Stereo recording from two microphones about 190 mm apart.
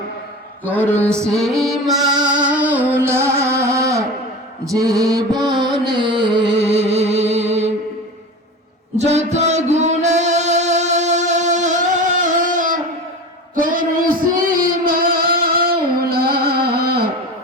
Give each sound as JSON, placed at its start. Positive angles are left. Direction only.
{"t": 0.6, "sound": "a sound", "side_deg": -10}
{"t": 1.4, "sound": "music", "side_deg": 0}
{"t": 4.6, "sound": "mantra", "side_deg": -15}
{"t": 5.5, "sound": "music", "side_deg": -20}
{"t": 9.0, "sound": "music", "side_deg": -35}
{"t": 13.6, "sound": "child singing", "side_deg": -45}